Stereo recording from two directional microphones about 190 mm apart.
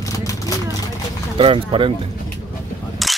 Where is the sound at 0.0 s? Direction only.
15° left (ahead or behind).